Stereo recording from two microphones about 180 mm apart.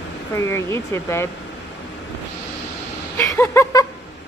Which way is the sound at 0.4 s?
15° left (ahead or behind).